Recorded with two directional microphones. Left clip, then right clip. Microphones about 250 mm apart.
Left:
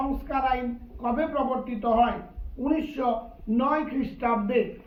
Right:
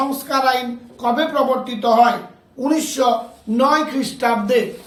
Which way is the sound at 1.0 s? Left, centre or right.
Centre.